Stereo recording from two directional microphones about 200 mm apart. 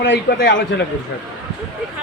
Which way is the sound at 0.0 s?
60° left (ahead or behind).